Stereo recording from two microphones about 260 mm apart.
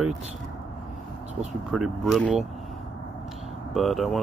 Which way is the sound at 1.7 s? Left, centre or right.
Centre.